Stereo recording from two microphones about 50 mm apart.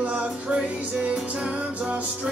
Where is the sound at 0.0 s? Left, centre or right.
Right.